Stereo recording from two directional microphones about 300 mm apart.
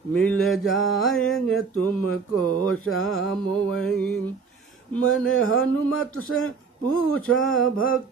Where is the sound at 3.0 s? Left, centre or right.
Centre.